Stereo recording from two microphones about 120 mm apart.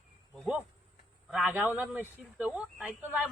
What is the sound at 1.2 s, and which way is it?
A woman's voice, 5° right (ahead or behind).